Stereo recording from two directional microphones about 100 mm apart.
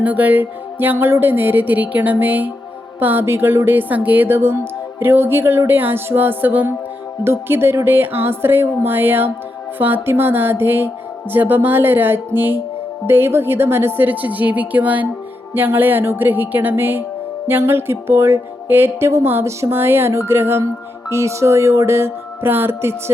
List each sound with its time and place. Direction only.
0.0 s speech: 15° right (ahead or behind)